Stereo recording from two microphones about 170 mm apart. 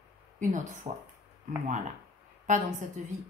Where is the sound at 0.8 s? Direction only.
35° right (ahead or behind).